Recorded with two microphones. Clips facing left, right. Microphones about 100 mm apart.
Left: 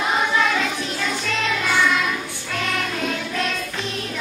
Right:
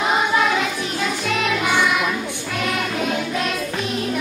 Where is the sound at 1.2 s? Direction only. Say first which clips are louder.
Right 4 dB; 15° right (ahead or behind).